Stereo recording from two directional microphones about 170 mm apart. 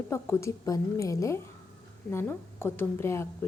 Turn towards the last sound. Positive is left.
turn(degrees=15)  # may be behind; listen again after turning